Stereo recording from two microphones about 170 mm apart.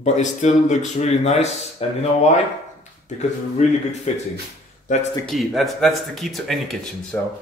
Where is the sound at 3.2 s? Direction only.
40° left (ahead or behind).